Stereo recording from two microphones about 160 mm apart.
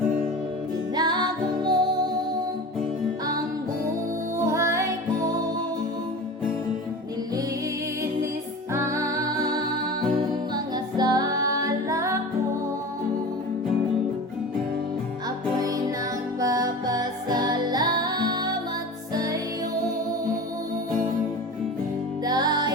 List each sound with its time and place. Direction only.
0.9 s music: 25° right (ahead or behind)
4.4 s music: 15° right (ahead or behind)
8.7 s music: 20° right (ahead or behind)
15.5 s music: 20° right (ahead or behind)
22.2 s music: 25° right (ahead or behind)